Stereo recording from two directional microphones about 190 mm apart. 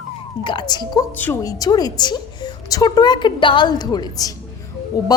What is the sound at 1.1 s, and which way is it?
A woman's voice, 10° left (ahead or behind).